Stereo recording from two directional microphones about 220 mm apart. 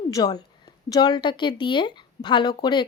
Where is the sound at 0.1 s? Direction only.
15° left (ahead or behind).